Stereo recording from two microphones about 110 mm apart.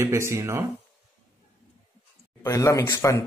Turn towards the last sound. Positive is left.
turn(degrees=30)  # may be behind; listen again after turning